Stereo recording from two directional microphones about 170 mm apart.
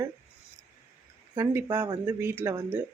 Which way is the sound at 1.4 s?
15° right (ahead or behind).